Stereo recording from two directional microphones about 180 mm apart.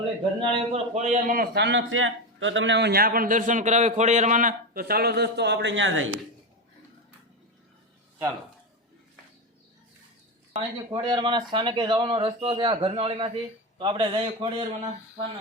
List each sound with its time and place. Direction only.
0.3 s a man's voice: 40° right (ahead or behind)
1.5 s a man's voice: 80° right
10.5 s speech: 25° right (ahead or behind)